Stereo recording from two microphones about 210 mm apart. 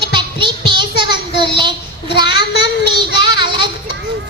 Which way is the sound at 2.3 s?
50° left (ahead or behind).